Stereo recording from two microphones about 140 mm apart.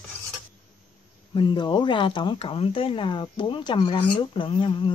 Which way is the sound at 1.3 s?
35° left (ahead or behind).